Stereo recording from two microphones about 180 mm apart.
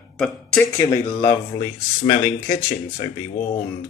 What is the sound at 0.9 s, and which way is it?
Speech, 25° left (ahead or behind).